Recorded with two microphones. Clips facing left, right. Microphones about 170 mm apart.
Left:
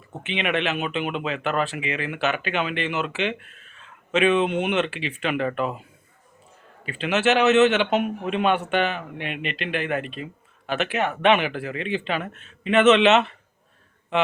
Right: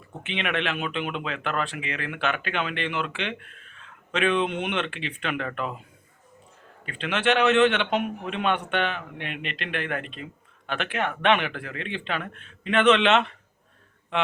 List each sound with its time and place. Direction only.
0.1 s speech: 5° left (ahead or behind)
6.8 s speech: 5° left (ahead or behind)